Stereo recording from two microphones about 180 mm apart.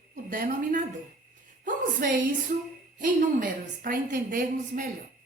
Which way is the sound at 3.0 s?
45° right (ahead or behind).